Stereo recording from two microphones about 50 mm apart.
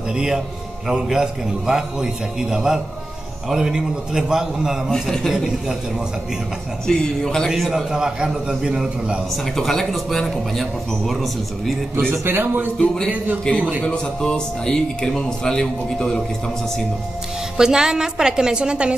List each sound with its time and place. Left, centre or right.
0.1 s a woman's voice: centre
4.8 s a man's voice: centre
6.9 s speech: centre
7.4 s a man's voice: centre
9.6 s a man's voice: centre
12.3 s speech: right
12.7 s speech: centre
13.6 s a man's voice: right
13.8 s speech: centre
17.6 s a woman's voice: centre